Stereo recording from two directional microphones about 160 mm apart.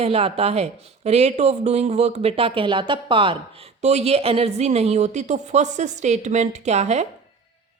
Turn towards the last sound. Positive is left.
turn(degrees=-45)  # may be behind; listen again after turning